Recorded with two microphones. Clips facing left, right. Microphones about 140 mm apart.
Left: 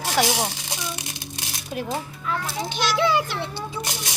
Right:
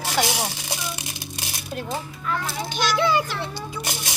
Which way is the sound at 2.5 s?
20° left (ahead or behind).